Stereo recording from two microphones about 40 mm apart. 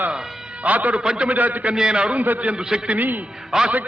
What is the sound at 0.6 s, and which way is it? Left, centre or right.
Speech, right.